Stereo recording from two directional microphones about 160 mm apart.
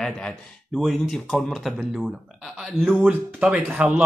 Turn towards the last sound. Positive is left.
turn(degrees=-10)  # may be behind; listen again after turning